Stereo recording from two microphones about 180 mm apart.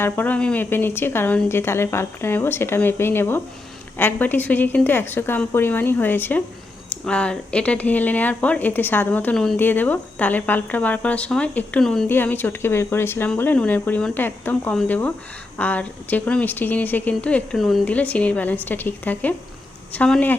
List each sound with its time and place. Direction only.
0.0 s speech: 10° left (ahead or behind)